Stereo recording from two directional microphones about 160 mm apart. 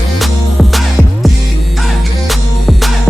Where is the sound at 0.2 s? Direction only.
Centre (ahead or behind).